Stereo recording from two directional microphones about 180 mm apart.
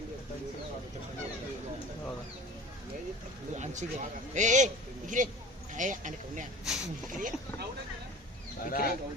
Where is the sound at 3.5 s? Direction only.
40° right (ahead or behind).